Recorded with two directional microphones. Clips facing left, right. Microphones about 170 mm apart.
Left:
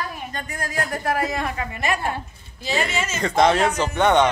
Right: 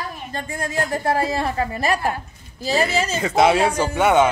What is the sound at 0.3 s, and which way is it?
A woman's voice, 30° right (ahead or behind).